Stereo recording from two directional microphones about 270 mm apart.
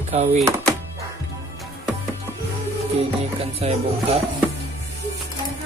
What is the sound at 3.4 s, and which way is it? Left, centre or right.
Music, right.